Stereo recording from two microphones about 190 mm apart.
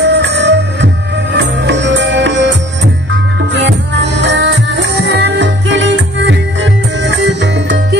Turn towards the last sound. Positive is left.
turn(degrees=-70)  # may be behind; listen again after turning